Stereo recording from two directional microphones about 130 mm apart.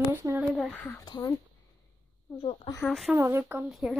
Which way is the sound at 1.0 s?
35° left (ahead or behind).